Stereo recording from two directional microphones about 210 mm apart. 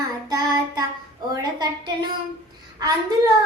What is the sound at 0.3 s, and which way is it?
Child singing, 20° right (ahead or behind).